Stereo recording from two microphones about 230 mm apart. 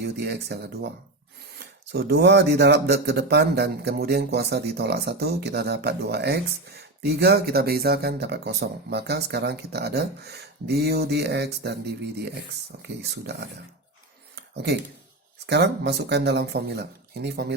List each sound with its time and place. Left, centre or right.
0.0 s speech: right
14.3 s a sound: right
15.4 s speech: right